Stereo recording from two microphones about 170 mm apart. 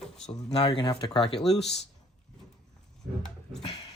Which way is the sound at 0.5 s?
30° left (ahead or behind).